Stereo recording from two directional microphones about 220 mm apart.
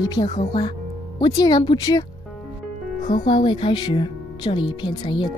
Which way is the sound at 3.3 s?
20° left (ahead or behind).